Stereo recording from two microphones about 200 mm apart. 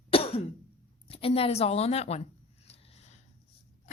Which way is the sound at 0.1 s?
30° left (ahead or behind).